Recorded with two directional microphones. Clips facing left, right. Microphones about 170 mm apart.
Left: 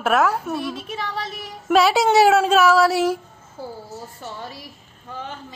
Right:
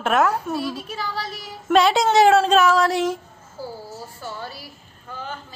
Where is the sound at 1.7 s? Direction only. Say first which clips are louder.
Left 1 dB; 5° left (ahead or behind).